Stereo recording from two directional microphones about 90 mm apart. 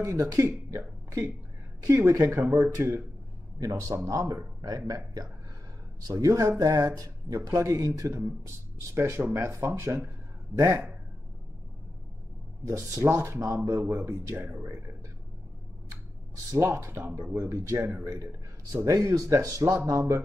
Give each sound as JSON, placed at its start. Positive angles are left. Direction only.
{"t": 0.0, "sound": "speech", "side_deg": -35}
{"t": 3.5, "sound": "speech", "side_deg": -40}
{"t": 12.6, "sound": "speech", "side_deg": -35}
{"t": 16.5, "sound": "speech", "side_deg": -30}